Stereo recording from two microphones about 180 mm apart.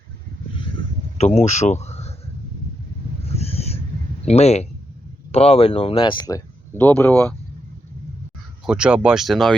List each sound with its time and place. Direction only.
1.2 s speech: 35° left (ahead or behind)
3.2 s owl: 35° left (ahead or behind)
4.3 s speech: 35° left (ahead or behind); by 7.3 s 10° left (ahead or behind)
8.6 s speech: 5° right (ahead or behind)